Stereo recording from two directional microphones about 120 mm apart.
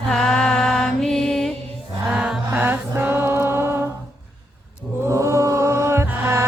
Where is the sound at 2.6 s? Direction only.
15° right (ahead or behind).